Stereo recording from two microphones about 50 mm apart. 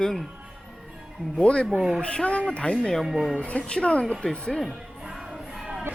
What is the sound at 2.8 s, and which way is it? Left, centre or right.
Speech, centre.